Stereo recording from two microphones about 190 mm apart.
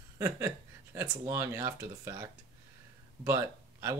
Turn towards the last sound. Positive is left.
turn(degrees=-15)  # may be behind; listen again after turning